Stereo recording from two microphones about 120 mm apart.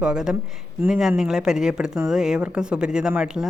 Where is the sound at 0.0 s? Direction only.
5° right (ahead or behind).